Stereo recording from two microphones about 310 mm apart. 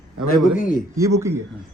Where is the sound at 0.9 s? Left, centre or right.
Centre.